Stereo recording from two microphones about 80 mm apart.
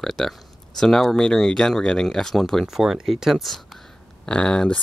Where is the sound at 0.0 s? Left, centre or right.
Centre.